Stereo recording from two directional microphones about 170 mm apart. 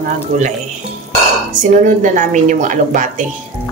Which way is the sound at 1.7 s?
50° right (ahead or behind).